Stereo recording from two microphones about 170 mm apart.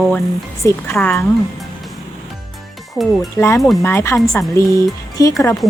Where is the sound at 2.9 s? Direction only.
Centre (ahead or behind).